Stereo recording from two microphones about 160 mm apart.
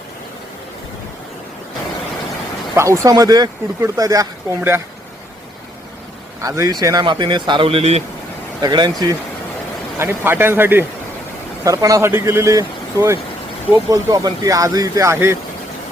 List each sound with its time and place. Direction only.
2.7 s speech: 20° right (ahead or behind)
6.4 s speech: 20° right (ahead or behind); by 8.0 s 40° right (ahead or behind)
8.6 s speech: 25° right (ahead or behind)
10.0 s speech: 15° right (ahead or behind)